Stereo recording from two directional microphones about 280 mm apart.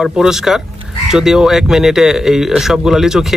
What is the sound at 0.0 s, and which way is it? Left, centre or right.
Speech, centre.